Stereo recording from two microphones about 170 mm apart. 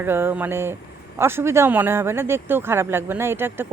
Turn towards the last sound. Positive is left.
turn(degrees=-15)  # may be behind; listen again after turning